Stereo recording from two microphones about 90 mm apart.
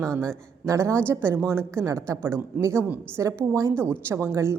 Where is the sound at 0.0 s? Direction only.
30° right (ahead or behind).